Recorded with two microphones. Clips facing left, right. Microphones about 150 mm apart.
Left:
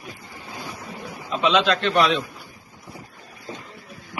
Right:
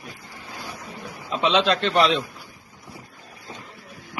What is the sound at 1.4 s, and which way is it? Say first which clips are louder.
Speech: left 1 dB; 35° right (ahead or behind).